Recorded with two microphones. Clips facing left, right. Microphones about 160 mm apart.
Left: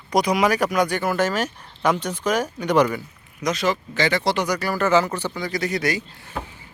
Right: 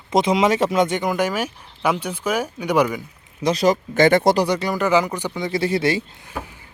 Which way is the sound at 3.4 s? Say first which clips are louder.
Right 5 dB; 35° right (ahead or behind).